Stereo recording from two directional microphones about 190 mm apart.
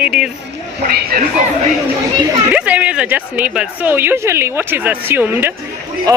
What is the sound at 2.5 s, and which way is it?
A woman's voice, 5° right (ahead or behind).